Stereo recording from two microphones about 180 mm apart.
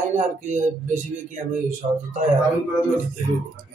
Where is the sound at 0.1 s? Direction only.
40° right (ahead or behind).